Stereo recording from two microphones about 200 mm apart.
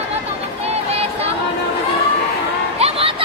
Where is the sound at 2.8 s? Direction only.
30° right (ahead or behind).